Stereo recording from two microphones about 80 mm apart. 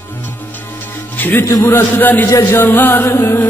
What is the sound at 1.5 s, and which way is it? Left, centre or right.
Music, left.